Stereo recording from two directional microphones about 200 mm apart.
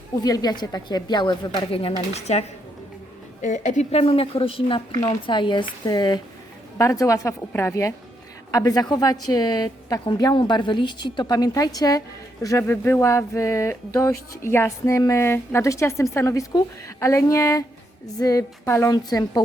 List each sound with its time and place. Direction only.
0.2 s a woman's voice: 20° left (ahead or behind)